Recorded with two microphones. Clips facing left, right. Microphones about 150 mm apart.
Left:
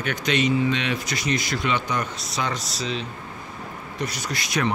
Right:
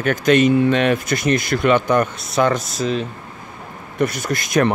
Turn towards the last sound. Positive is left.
turn(degrees=-50)  # may be behind; listen again after turning